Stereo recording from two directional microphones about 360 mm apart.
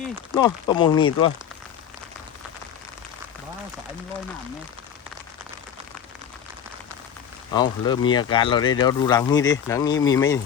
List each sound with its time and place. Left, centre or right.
0.3 s speech: centre
7.5 s speech: centre